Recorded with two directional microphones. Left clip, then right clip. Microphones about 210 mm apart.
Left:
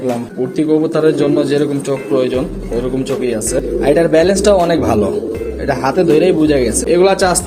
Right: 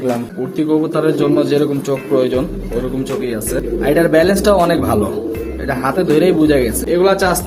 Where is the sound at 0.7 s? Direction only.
10° left (ahead or behind).